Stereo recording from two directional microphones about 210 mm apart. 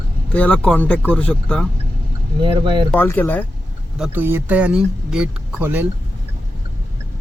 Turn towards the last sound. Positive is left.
turn(degrees=-10)  # may be behind; listen again after turning